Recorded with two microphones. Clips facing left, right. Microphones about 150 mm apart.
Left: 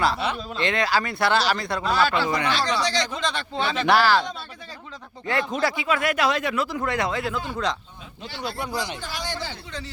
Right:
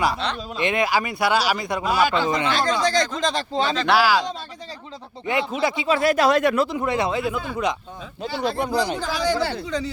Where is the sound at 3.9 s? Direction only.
10° right (ahead or behind).